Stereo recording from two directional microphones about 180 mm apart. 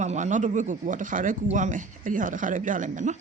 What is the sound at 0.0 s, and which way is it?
A woman's voice, 40° right (ahead or behind).